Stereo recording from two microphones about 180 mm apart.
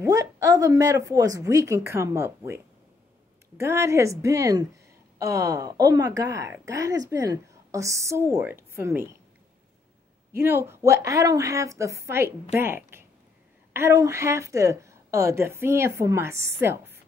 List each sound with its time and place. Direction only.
0.0 s a woman's voice: 20° right (ahead or behind)
10.3 s a woman's voice: 15° right (ahead or behind)